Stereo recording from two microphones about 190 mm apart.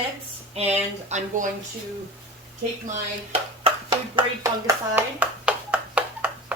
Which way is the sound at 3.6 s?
25° right (ahead or behind).